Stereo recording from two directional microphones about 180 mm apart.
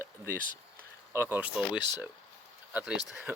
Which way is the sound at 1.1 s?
15° right (ahead or behind).